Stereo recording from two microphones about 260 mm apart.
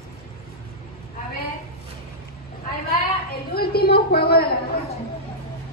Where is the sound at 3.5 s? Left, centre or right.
Left.